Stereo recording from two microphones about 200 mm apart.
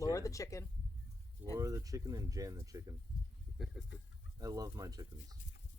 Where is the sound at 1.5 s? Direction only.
15° right (ahead or behind).